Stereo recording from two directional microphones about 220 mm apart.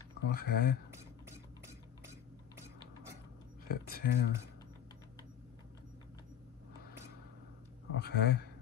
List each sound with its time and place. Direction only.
0.3 s speech: 45° left (ahead or behind)
3.6 s speech: 45° left (ahead or behind)
7.9 s speech: 50° left (ahead or behind)